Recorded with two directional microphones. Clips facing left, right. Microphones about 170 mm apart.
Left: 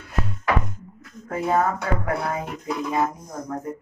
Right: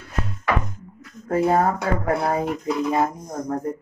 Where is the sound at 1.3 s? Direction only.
35° right (ahead or behind).